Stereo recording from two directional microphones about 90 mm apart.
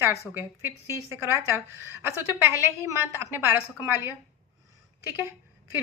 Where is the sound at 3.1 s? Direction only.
30° right (ahead or behind).